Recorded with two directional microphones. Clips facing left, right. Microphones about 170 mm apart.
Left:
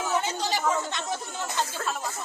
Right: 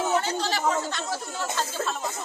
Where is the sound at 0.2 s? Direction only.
20° left (ahead or behind).